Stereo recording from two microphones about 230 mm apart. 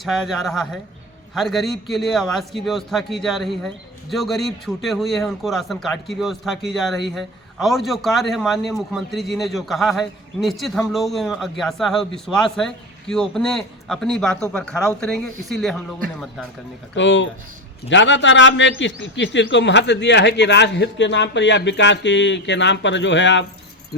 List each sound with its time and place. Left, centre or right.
0.0 s a man's voice: centre
16.9 s a man's voice: left